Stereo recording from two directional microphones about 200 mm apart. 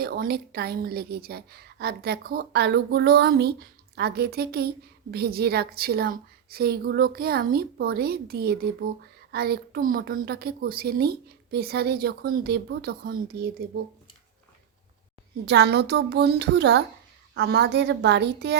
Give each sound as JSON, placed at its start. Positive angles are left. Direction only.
{"t": 0.0, "sound": "a woman's voice", "side_deg": -50}
{"t": 15.4, "sound": "a child's voice", "side_deg": -55}